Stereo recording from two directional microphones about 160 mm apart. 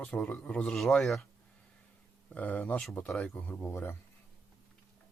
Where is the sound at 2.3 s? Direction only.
10° left (ahead or behind).